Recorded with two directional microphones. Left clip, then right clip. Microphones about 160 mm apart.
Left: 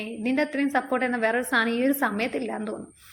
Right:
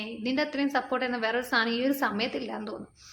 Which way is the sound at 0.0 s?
20° left (ahead or behind).